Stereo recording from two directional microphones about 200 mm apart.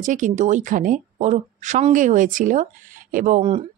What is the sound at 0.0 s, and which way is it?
Speech, 40° right (ahead or behind).